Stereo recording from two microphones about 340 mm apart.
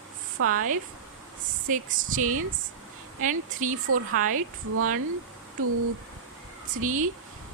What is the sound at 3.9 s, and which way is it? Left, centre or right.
A woman's voice, right.